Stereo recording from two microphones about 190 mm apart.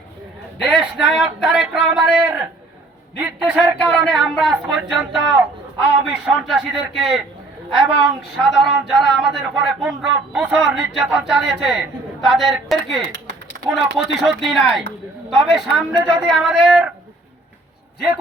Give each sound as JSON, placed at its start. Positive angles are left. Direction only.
{"t": 0.6, "sound": "speech", "side_deg": 0}
{"t": 3.9, "sound": "speech", "side_deg": 0}
{"t": 7.7, "sound": "a woman's voice", "side_deg": -25}
{"t": 8.4, "sound": "speech", "side_deg": 0}